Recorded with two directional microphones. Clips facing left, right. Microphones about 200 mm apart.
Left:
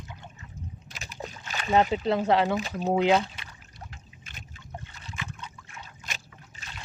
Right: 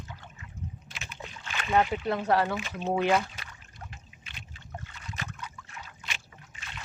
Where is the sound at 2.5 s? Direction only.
40° left (ahead or behind).